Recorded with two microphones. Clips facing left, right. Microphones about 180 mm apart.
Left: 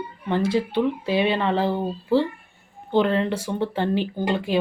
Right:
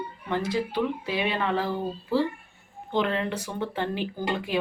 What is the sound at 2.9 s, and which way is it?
Speech, 35° left (ahead or behind).